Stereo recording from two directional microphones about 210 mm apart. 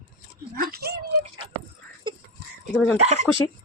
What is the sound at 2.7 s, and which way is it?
Speech, 5° left (ahead or behind).